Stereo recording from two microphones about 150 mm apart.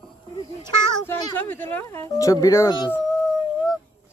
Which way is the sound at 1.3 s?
10° left (ahead or behind).